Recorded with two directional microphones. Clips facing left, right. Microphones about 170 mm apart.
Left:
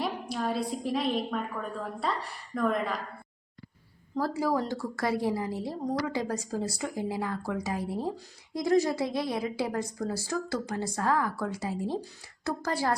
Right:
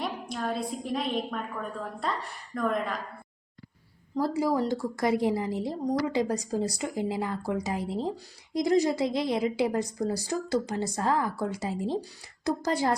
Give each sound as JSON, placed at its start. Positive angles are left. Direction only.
{"t": 0.0, "sound": "a woman's voice", "side_deg": 5}
{"t": 4.2, "sound": "a woman's voice", "side_deg": -15}